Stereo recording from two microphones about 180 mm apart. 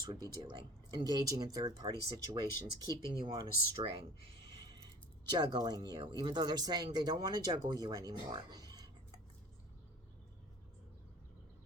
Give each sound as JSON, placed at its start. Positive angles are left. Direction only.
{"t": 0.0, "sound": "speech", "side_deg": -20}
{"t": 4.5, "sound": "a sound", "side_deg": -25}
{"t": 5.3, "sound": "speech", "side_deg": -25}